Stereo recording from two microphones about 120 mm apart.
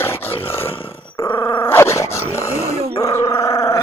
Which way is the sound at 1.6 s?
20° left (ahead or behind).